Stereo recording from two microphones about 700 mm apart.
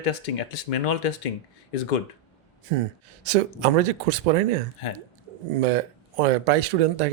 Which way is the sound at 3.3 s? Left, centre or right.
Right.